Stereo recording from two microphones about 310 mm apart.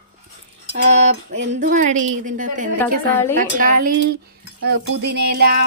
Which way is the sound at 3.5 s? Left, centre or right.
Right.